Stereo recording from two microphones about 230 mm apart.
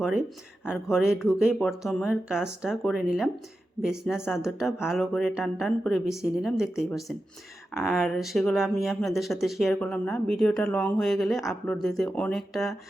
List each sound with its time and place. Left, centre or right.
0.6 s speech: centre